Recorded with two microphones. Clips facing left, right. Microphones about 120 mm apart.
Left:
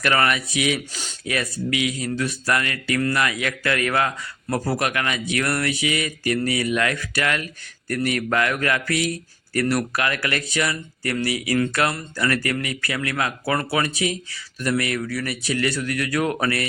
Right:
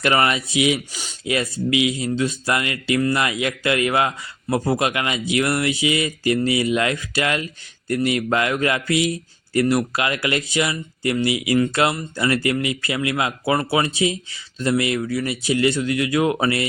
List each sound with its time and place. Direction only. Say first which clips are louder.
0.0 s speech: right 2 dB; 20° right (ahead or behind)